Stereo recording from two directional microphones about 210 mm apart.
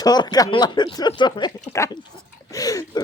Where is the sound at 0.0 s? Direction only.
20° left (ahead or behind).